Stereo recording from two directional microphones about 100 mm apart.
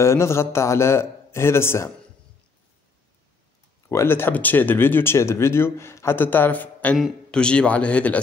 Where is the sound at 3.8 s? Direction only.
25° left (ahead or behind).